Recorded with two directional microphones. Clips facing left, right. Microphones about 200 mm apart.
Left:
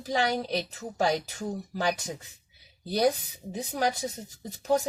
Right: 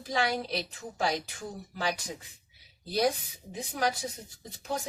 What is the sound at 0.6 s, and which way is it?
Speech, 40° left (ahead or behind).